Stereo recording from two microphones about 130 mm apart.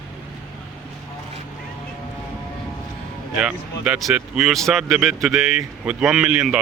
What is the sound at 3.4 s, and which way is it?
Speech, 5° right (ahead or behind).